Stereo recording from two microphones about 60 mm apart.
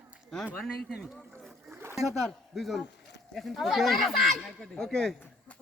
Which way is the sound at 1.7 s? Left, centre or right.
Right.